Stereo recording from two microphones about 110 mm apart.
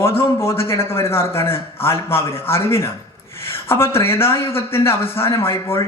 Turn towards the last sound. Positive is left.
turn(degrees=25)  # may be behind; listen again after turning